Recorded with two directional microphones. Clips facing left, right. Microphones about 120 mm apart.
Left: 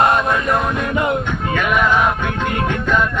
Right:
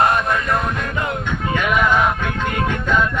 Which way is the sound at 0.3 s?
25° left (ahead or behind).